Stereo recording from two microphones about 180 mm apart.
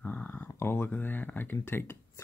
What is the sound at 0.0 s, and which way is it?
Speech, 10° left (ahead or behind).